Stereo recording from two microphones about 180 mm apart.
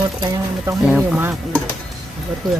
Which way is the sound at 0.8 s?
5° right (ahead or behind).